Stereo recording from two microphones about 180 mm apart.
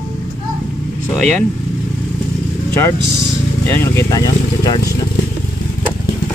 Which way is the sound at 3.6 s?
15° left (ahead or behind).